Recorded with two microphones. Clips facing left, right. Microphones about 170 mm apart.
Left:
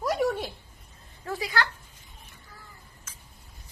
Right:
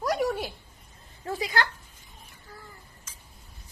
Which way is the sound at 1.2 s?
20° right (ahead or behind).